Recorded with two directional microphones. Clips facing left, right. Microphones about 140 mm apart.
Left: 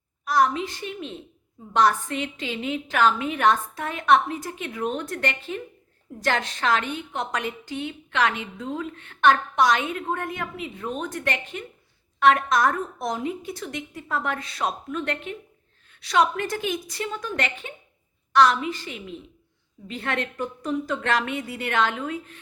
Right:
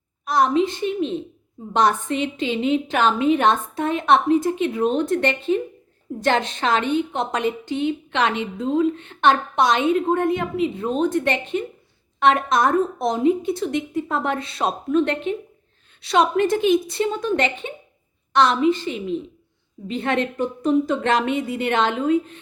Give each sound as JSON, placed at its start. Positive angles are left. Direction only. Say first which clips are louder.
{"t": 0.3, "sound": "a woman's voice", "louder": "right 4 dB", "side_deg": -25}